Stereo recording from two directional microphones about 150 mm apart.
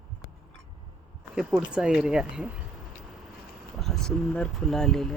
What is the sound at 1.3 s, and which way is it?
Speech, 5° right (ahead or behind).